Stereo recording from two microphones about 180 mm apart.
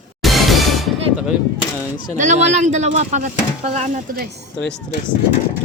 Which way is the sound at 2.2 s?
40° right (ahead or behind).